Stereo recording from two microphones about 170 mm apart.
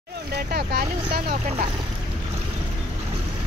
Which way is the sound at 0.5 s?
70° right (ahead or behind).